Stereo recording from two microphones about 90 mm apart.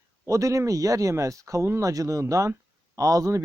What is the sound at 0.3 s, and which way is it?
Speech, 35° right (ahead or behind).